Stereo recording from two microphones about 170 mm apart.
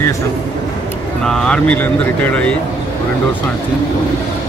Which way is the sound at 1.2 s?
5° left (ahead or behind).